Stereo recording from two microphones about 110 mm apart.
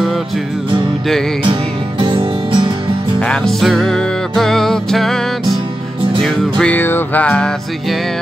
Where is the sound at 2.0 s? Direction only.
55° right (ahead or behind).